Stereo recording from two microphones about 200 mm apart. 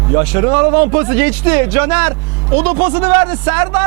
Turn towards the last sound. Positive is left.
turn(degrees=-10)  # may be behind; listen again after turning